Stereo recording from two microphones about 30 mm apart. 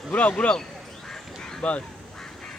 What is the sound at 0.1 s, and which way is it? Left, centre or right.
Speech, left.